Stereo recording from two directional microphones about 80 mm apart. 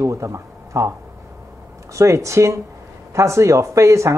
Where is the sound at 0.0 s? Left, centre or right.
Right.